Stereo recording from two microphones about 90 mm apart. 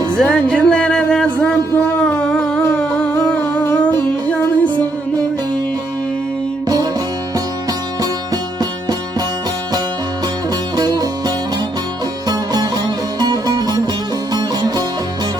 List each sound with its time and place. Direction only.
0.2 s music: 5° left (ahead or behind)
10.8 s music: 50° right (ahead or behind)
12.3 s music: 45° right (ahead or behind)